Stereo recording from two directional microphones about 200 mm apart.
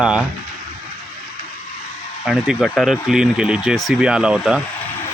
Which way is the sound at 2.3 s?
Centre (ahead or behind).